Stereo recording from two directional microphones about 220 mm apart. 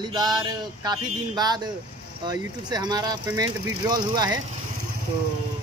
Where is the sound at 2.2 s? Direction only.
20° right (ahead or behind).